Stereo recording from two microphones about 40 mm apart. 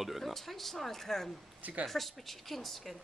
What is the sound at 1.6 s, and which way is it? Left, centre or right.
Speech, right.